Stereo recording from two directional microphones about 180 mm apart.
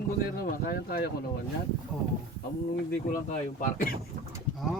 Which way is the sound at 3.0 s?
50° left (ahead or behind).